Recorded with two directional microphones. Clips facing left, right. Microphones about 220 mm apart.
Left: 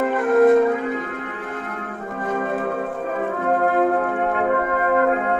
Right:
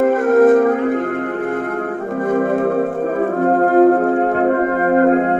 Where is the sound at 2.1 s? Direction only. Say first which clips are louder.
Right 8 dB; 55° right (ahead or behind).